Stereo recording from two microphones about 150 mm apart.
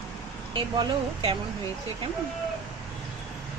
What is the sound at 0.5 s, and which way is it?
Speech, 35° right (ahead or behind).